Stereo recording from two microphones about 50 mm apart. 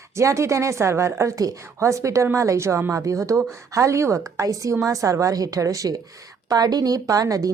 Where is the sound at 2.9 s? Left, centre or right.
Right.